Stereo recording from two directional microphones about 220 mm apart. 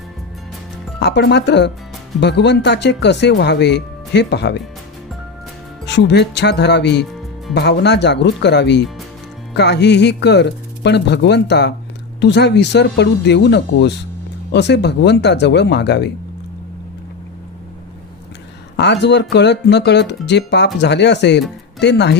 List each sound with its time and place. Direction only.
0.9 s speech: 50° left (ahead or behind)
5.8 s speech: 50° left (ahead or behind)
7.0 s music: centre (ahead or behind)
7.5 s speech: 50° left (ahead or behind)
18.8 s speech: 50° left (ahead or behind)